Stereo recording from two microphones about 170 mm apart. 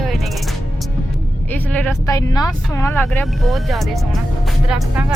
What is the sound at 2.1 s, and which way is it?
Speech, 20° left (ahead or behind).